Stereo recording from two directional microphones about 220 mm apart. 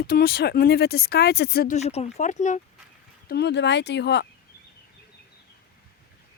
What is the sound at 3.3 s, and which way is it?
Speech, 50° left (ahead or behind).